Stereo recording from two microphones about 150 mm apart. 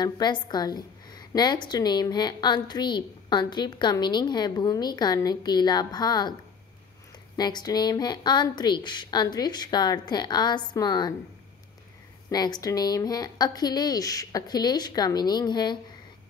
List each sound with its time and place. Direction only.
0.0 s a woman's voice: 30° left (ahead or behind)
7.3 s a woman's voice: 25° left (ahead or behind)
12.3 s a woman's voice: 25° left (ahead or behind)